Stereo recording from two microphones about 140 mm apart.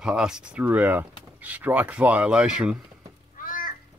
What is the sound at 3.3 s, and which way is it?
Cat, 75° left (ahead or behind).